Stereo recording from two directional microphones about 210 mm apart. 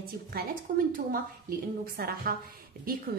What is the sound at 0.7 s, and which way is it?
Speech, 45° right (ahead or behind).